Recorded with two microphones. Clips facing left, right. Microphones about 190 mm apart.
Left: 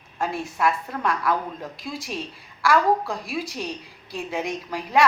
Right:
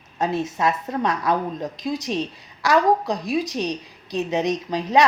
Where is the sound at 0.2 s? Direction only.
20° right (ahead or behind).